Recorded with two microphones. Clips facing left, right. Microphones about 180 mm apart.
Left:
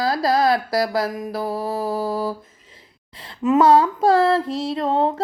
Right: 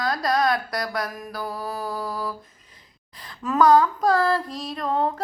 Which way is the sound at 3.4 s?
25° left (ahead or behind).